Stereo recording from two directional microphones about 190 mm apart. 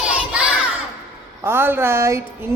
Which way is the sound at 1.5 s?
10° right (ahead or behind).